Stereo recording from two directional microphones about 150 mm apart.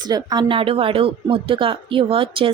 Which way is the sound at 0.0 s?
25° right (ahead or behind).